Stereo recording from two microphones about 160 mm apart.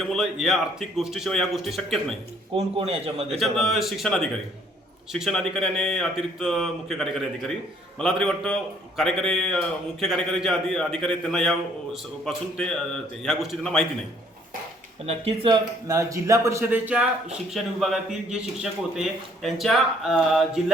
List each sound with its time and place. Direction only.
0.0 s speech: centre (ahead or behind)
2.6 s a man's voice: 40° right (ahead or behind)
3.4 s speech: centre (ahead or behind)
15.0 s speech: 35° right (ahead or behind); by 20.7 s centre (ahead or behind)